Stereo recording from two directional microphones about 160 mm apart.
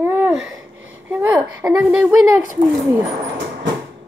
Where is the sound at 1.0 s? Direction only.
10° right (ahead or behind).